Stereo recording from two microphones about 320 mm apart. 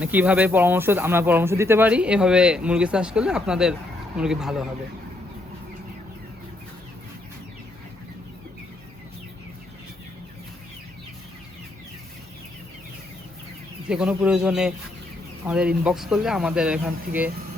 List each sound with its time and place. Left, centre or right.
0.0 s speech: centre
13.8 s speech: centre